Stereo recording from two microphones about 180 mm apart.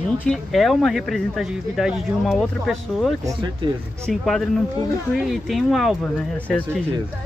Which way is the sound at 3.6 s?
25° right (ahead or behind).